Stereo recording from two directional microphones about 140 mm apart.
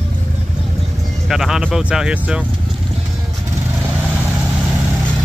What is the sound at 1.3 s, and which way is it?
Speech, 5° right (ahead or behind).